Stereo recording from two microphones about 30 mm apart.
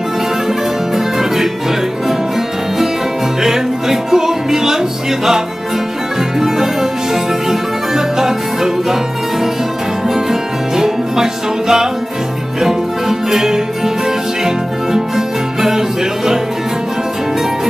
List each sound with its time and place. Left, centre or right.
0.9 s music: centre
3.4 s music: centre
6.4 s music: centre
10.8 s music: centre
13.3 s music: centre